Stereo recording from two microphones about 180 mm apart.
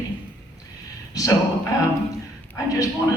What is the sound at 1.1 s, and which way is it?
A man's voice, 20° left (ahead or behind).